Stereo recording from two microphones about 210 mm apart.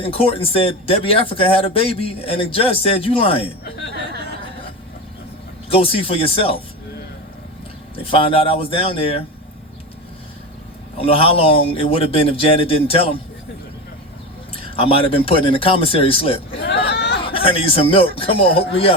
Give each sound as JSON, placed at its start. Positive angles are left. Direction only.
{"t": 0.0, "sound": "speech", "side_deg": 25}
{"t": 5.6, "sound": "speech", "side_deg": 25}
{"t": 8.0, "sound": "speech", "side_deg": 25}
{"t": 10.9, "sound": "speech", "side_deg": 25}
{"t": 14.5, "sound": "speech", "side_deg": 25}
{"t": 16.6, "sound": "a sound", "side_deg": 55}
{"t": 17.2, "sound": "speech", "side_deg": 25}